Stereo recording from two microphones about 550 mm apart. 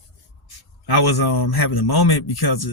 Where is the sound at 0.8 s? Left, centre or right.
Left.